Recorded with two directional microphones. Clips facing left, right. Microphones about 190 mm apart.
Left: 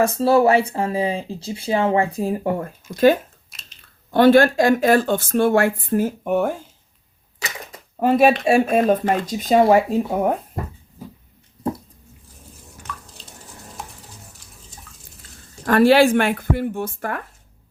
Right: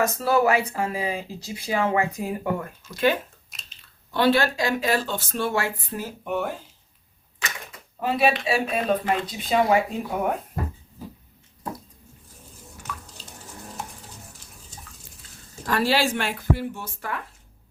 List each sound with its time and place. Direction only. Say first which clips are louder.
0.0 s speech: left 5 dB; 30° left (ahead or behind); by 6.5 s 45° left (ahead or behind)
7.9 s speech: left 7 dB; 50° left (ahead or behind)
10.1 s speech: left 5 dB; 30° left (ahead or behind)
12.9 s drip: left 1 dB; 10° right (ahead or behind)
15.6 s speech: left 9 dB; 55° left (ahead or behind)